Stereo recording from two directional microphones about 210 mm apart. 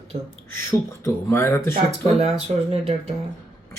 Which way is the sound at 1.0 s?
10° left (ahead or behind).